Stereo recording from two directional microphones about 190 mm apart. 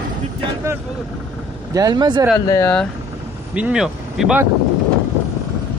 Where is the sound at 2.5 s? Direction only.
10° left (ahead or behind).